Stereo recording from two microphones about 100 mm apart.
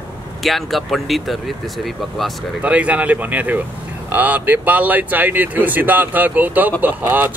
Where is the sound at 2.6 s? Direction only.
15° right (ahead or behind).